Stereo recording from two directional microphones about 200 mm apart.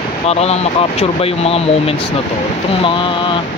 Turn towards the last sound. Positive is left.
turn(degrees=25)  # may be behind; listen again after turning